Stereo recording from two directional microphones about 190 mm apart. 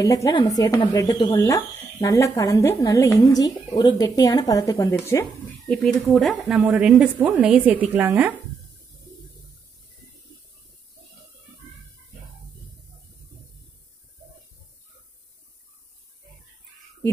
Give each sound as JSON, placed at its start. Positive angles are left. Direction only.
{"t": 0.0, "sound": "speech", "side_deg": 15}
{"t": 5.7, "sound": "a woman's voice", "side_deg": 5}